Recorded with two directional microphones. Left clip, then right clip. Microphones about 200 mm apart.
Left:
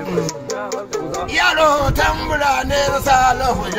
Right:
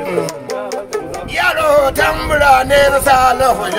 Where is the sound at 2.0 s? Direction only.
5° right (ahead or behind).